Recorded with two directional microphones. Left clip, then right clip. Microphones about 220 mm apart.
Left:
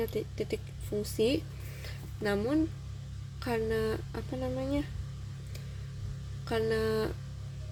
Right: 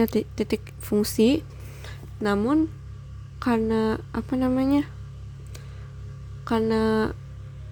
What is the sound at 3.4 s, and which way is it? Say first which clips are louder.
Speech: right 7 dB; 40° right (ahead or behind).